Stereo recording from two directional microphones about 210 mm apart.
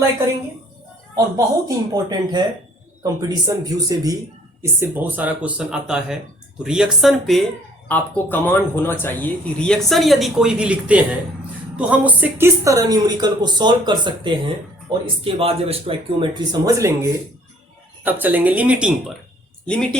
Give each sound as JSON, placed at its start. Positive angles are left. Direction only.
{"t": 1.1, "sound": "speech", "side_deg": -15}